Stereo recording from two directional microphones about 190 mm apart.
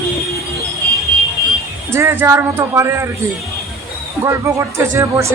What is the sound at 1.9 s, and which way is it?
A woman's voice, 10° right (ahead or behind).